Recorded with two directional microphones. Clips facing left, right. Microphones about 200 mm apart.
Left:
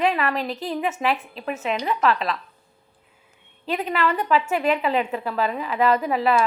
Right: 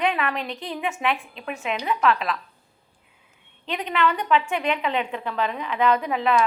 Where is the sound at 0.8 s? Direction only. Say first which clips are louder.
Left 1 dB; 40° left (ahead or behind).